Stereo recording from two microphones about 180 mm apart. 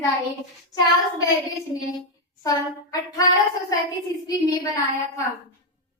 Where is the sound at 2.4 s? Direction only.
20° left (ahead or behind).